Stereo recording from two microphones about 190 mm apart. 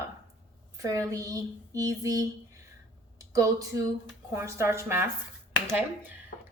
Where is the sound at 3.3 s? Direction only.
15° right (ahead or behind).